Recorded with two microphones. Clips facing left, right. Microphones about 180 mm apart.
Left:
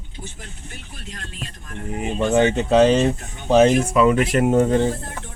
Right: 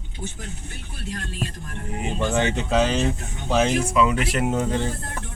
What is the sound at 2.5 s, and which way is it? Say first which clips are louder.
Speech: left 7 dB; 35° left (ahead or behind).